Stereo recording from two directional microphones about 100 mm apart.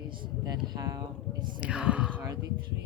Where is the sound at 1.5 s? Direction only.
10° right (ahead or behind).